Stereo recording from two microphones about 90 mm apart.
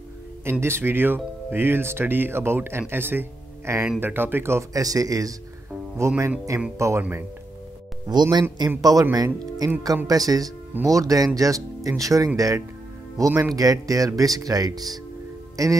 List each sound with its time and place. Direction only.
0.5 s speech: 30° right (ahead or behind)
4.7 s speech: 40° right (ahead or behind); by 7.2 s 25° right (ahead or behind)
8.1 s a man's voice: 55° right (ahead or behind)